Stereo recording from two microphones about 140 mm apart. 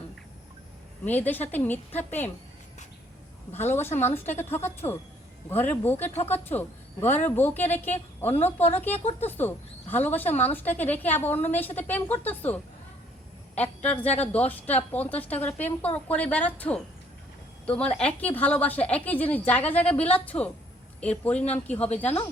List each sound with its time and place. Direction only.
1.0 s speech: 10° left (ahead or behind)
3.5 s speech: 15° left (ahead or behind)
13.6 s speech: 10° left (ahead or behind)
17.9 s speech: 10° left (ahead or behind)